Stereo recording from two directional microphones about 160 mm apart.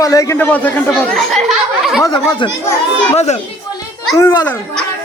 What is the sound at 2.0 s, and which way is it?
Speech, 30° left (ahead or behind).